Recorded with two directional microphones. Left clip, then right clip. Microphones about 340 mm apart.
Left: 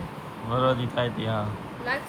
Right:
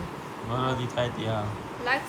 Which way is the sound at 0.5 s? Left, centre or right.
Centre.